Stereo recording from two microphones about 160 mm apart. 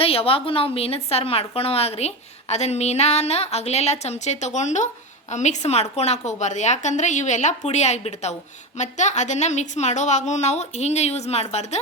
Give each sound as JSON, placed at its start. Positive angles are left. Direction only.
{"t": 0.0, "sound": "a woman's voice", "side_deg": 35}